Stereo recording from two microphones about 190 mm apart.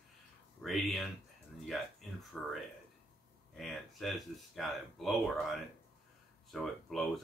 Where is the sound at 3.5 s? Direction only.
Centre (ahead or behind).